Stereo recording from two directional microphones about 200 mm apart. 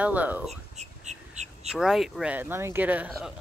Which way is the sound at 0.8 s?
35° right (ahead or behind).